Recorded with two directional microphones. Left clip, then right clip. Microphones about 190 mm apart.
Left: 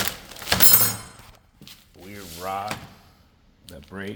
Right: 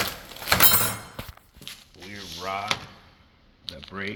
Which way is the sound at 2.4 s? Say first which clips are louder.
Left 2 dB; 5° left (ahead or behind).